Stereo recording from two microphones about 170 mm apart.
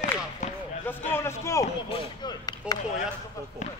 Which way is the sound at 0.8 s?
15° left (ahead or behind).